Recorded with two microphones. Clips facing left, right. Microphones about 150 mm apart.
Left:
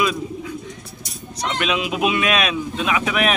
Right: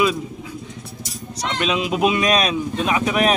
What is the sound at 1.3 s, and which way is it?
Speech, 30° right (ahead or behind).